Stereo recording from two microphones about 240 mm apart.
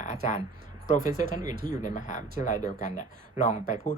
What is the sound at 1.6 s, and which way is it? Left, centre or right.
Speech, centre.